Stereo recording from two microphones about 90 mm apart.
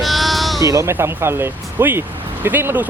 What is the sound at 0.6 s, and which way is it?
Speech, 40° right (ahead or behind).